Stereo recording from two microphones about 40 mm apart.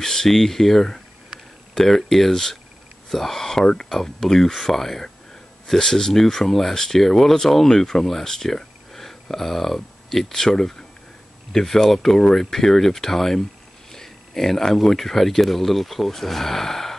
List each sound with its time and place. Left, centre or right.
0.0 s speech: centre